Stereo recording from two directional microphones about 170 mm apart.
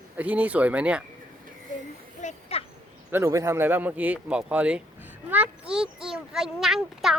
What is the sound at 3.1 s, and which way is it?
Speech, 15° right (ahead or behind).